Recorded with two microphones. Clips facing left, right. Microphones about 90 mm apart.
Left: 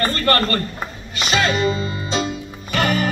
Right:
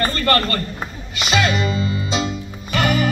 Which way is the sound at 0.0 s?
35° left (ahead or behind).